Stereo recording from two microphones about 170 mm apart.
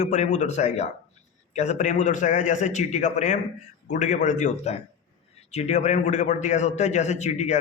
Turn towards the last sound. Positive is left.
turn(degrees=45)  # may be behind; listen again after turning